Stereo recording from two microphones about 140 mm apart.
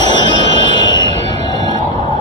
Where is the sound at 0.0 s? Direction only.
30° left (ahead or behind).